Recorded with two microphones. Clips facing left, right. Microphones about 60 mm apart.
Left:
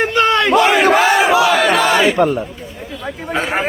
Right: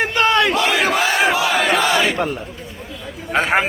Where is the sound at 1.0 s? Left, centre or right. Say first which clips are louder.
Left 5 dB; centre.